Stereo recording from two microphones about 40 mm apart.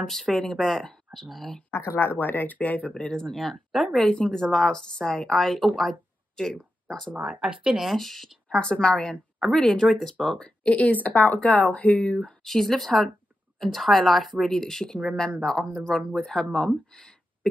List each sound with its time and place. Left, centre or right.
0.0 s speech: centre
1.7 s speech: left
2.9 s a woman's voice: centre
3.3 s speech: centre
4.0 s a woman's voice: centre
6.4 s a woman's voice: centre
7.2 s speech: centre
7.4 s speech: right
7.8 s speech: centre
8.5 s a woman's voice: left
9.4 s a woman's voice: centre
10.4 s speech: left
12.4 s a woman's voice: centre